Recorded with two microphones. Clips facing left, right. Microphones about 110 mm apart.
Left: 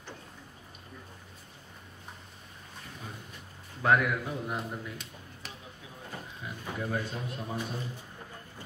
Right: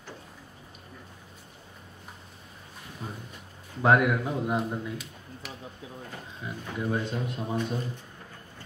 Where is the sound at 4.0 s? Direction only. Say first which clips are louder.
Right 5 dB; 25° right (ahead or behind).